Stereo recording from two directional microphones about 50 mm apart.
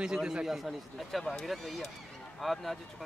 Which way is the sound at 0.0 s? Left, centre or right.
Centre.